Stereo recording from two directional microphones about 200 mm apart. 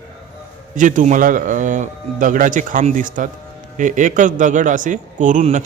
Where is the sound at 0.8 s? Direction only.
40° right (ahead or behind).